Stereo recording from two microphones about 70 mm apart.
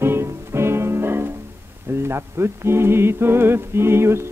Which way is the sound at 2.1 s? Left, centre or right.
Right.